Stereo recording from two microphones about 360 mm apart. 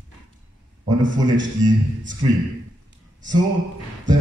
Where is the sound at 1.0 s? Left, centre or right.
Right.